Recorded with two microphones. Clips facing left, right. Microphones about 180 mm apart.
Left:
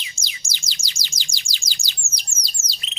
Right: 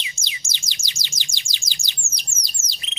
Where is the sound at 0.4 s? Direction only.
20° right (ahead or behind).